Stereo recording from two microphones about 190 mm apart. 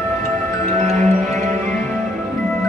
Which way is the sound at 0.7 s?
35° right (ahead or behind).